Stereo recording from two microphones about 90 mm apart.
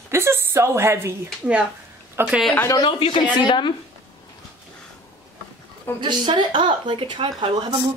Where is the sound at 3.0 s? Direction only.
65° left (ahead or behind).